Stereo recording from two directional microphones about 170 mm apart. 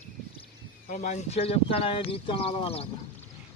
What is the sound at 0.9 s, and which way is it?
Speech, 45° left (ahead or behind).